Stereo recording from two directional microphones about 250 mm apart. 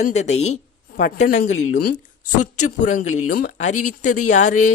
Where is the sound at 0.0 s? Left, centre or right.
Left.